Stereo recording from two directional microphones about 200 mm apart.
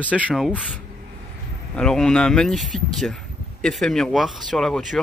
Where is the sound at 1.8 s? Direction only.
5° left (ahead or behind).